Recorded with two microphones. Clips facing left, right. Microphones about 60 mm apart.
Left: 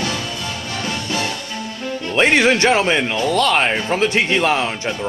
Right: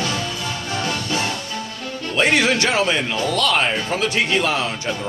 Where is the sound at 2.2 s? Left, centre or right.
Left.